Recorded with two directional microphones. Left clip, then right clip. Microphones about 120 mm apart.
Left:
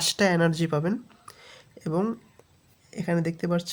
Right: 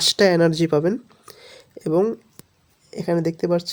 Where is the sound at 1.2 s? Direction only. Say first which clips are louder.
Right 4 dB; 40° right (ahead or behind).